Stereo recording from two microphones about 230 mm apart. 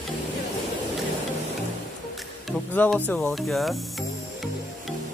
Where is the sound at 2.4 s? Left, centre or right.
Centre.